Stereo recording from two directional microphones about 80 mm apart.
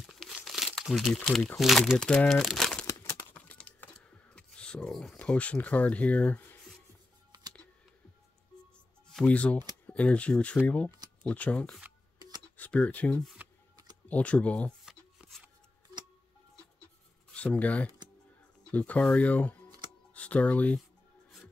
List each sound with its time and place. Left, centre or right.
0.0 s crumpling: centre
1.6 s speech: centre
3.3 s typing: centre
5.2 s speech: centre
9.1 s speech: centre
13.4 s a sound: right
14.0 s speech: centre
17.3 s speech: centre